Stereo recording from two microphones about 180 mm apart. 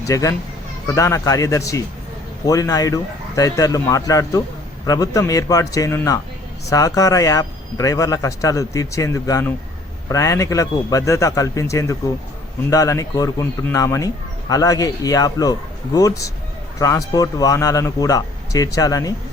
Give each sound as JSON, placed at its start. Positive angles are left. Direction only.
{"t": 0.0, "sound": "a man's voice", "side_deg": 15}